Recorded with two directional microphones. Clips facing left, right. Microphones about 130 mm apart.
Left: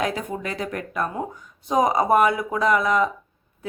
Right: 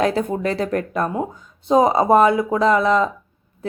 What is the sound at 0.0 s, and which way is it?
Speech, 35° right (ahead or behind).